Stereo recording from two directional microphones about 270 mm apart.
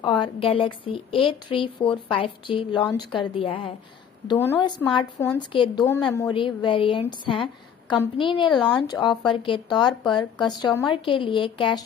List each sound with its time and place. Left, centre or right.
0.0 s speech: centre